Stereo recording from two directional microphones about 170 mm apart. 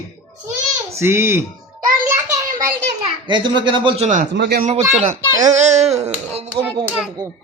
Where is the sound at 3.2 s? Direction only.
30° right (ahead or behind).